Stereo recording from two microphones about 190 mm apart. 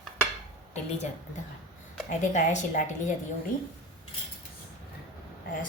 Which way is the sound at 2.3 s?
40° left (ahead or behind).